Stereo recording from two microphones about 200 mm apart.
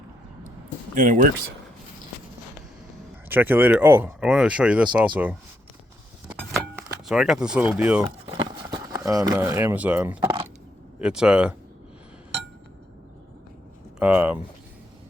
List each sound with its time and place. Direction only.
0.9 s speech: 40° right (ahead or behind)
3.2 s speech: 10° right (ahead or behind)
6.2 s keys jangling: 5° right (ahead or behind)
8.4 s speech: 20° right (ahead or behind)
10.2 s coin: 20° right (ahead or behind)
11.0 s speech: 5° right (ahead or behind)
14.0 s speech: 5° right (ahead or behind)